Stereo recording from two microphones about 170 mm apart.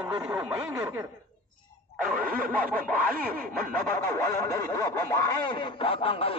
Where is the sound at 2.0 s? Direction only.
55° right (ahead or behind).